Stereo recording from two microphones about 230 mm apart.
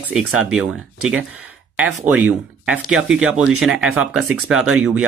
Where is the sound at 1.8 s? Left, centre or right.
Centre.